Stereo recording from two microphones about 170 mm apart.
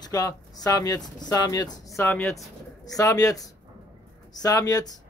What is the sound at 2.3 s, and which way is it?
Speech, 20° left (ahead or behind).